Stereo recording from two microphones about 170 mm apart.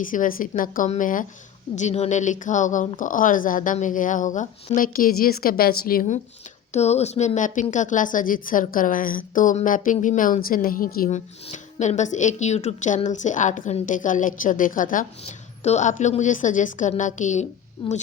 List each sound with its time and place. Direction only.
0.0 s speech: 50° left (ahead or behind)
6.7 s speech: 40° left (ahead or behind); by 11.2 s 55° left (ahead or behind)
11.5 s speech: 45° left (ahead or behind)
15.2 s speech: 40° left (ahead or behind)
17.8 s a woman's voice: 30° left (ahead or behind)